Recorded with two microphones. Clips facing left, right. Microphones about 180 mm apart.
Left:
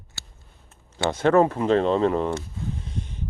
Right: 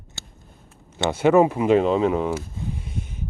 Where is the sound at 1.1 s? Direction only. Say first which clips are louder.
Right 2 dB; 10° right (ahead or behind).